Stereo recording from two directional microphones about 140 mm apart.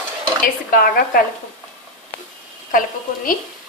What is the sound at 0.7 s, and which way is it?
Speech, 90° left.